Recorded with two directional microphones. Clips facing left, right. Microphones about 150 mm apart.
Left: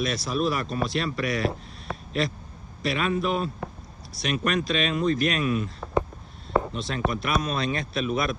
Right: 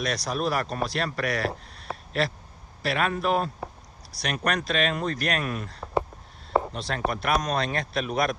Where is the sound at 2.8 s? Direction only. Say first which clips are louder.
Even; 55° right (ahead or behind).